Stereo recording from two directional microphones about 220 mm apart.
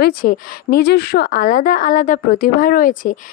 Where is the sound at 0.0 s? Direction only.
40° left (ahead or behind).